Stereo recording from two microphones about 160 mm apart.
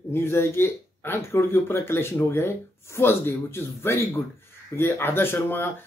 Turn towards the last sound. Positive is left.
turn(degrees=15)  # may be behind; listen again after turning